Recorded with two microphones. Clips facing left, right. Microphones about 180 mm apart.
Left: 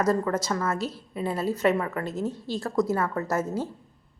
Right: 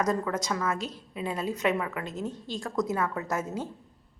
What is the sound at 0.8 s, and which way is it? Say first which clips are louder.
Speech: left 5 dB; 15° right (ahead or behind).